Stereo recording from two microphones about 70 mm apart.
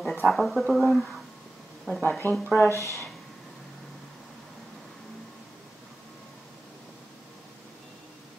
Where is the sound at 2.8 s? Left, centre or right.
Left.